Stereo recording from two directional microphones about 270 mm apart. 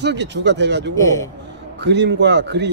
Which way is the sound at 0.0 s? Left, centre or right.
Right.